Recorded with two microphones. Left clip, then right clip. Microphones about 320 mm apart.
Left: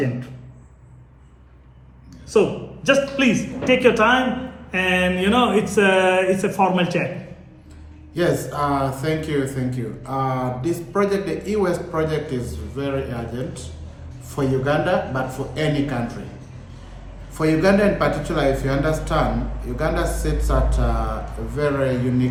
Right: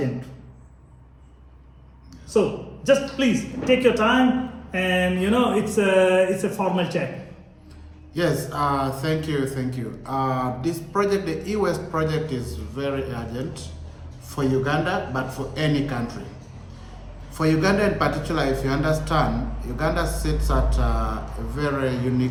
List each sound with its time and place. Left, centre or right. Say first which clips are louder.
2.8 s speech: left 2 dB; left
8.1 s speech: left 3 dB; centre
17.3 s speech: left 3 dB; centre